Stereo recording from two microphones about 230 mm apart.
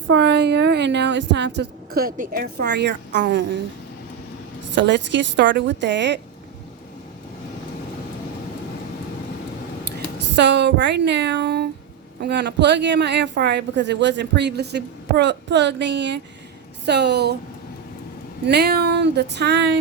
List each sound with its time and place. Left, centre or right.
0.1 s speech: right
4.7 s speech: right
10.3 s speech: right
18.4 s speech: right